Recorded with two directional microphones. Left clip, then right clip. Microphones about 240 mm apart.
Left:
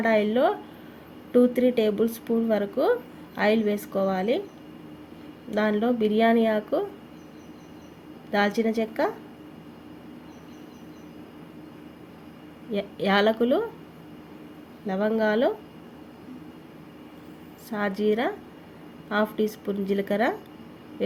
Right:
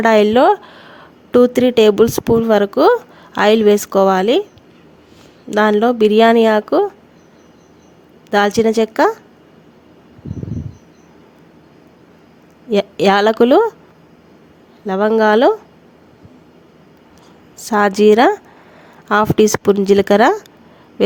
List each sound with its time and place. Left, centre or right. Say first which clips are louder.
0.0 s speech: right 12 dB; right
5.5 s speech: right 12 dB; right
8.3 s speech: right 11 dB; right
12.7 s speech: right 11 dB; right
14.8 s a woman's voice: right 12 dB; right
17.6 s a woman's voice: right 15 dB; right